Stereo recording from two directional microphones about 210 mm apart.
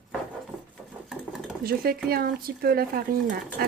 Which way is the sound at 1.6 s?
45° right (ahead or behind).